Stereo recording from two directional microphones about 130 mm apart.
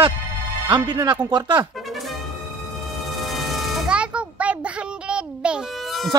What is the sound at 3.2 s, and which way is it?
Music, centre (ahead or behind).